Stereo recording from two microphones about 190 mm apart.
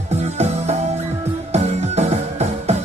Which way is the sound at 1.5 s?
35° right (ahead or behind).